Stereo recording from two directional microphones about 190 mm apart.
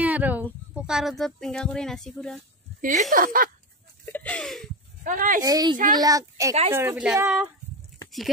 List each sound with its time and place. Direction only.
0.0 s speech: 10° right (ahead or behind)
2.8 s speech: 40° right (ahead or behind)
4.0 s a sound: 10° left (ahead or behind)
5.0 s speech: 45° right (ahead or behind)
5.4 s a woman's voice: 20° right (ahead or behind)